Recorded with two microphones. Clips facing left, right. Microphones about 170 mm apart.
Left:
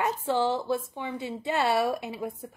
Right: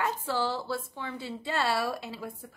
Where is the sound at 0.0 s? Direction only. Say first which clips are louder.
Left 4 dB; 20° left (ahead or behind).